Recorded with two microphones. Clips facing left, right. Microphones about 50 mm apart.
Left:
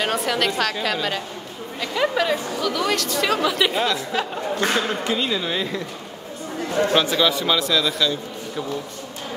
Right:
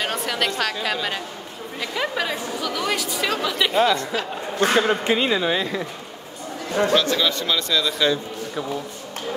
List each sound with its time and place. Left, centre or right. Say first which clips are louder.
0.0 s speech: left 2 dB; centre
4.7 s speech: right 3 dB; right
5.4 s speech: right 2 dB; centre
6.9 s speech: right 1 dB; centre
7.2 s speech: left 3 dB; centre